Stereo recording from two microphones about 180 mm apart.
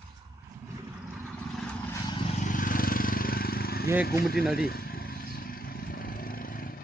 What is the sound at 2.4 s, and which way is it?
Vehicle, 50° left (ahead or behind).